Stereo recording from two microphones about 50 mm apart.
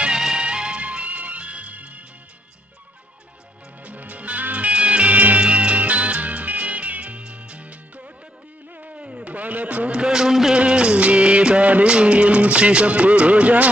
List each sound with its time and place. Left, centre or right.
0.0 s music: centre; by 2.0 s right
3.8 s music: right
9.0 s a sound: centre
10.5 s music of bollywood: centre